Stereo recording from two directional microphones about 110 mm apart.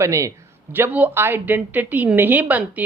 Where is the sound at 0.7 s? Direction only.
15° right (ahead or behind).